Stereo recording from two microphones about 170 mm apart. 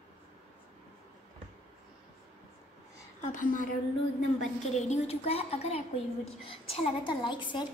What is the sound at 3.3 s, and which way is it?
Speech, 50° left (ahead or behind).